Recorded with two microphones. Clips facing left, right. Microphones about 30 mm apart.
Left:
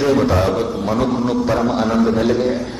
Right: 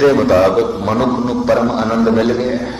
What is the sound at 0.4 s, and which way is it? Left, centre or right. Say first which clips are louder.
Speech: right 5 dB; right.